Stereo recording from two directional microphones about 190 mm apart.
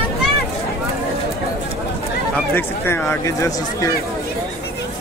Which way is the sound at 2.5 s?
10° left (ahead or behind).